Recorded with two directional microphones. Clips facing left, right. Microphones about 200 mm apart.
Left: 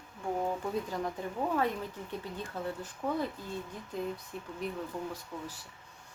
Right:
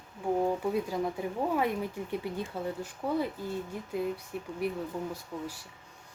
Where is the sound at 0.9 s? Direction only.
10° right (ahead or behind).